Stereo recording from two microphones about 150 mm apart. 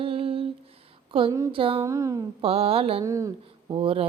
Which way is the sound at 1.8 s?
20° right (ahead or behind).